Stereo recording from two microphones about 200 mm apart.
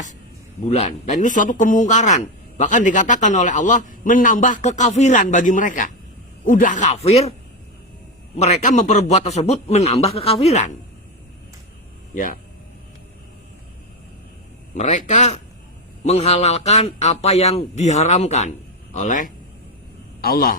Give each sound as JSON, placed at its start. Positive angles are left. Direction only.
{"t": 0.6, "sound": "a man's voice", "side_deg": 30}
{"t": 8.4, "sound": "a man's voice", "side_deg": 35}
{"t": 12.1, "sound": "speech", "side_deg": 40}
{"t": 14.8, "sound": "a man's voice", "side_deg": 35}